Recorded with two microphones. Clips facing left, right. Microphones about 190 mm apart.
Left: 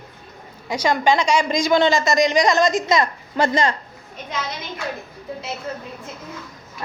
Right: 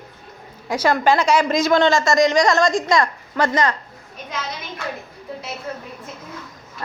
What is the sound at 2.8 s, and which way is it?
Speech, 20° left (ahead or behind).